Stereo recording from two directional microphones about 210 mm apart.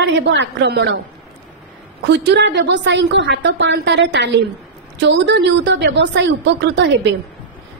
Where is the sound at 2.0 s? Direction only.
55° right (ahead or behind).